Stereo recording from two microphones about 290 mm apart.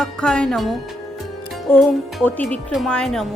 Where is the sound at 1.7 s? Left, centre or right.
Centre.